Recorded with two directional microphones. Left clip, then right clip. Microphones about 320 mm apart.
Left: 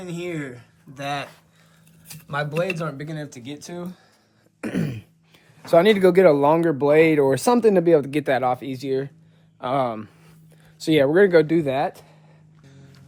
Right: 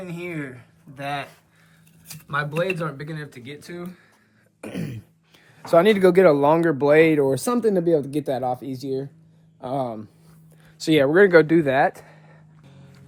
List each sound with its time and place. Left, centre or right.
0.0 s speech: centre
4.6 s throat clearing: left
5.6 s speech: centre